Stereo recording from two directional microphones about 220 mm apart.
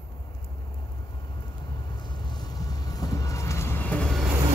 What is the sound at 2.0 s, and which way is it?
Train, 20° left (ahead or behind).